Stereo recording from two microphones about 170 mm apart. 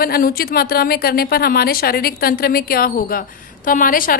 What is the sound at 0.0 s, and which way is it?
A woman's voice, 60° left (ahead or behind).